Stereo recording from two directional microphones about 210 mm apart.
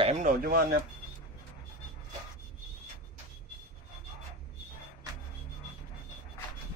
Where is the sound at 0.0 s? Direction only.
35° right (ahead or behind).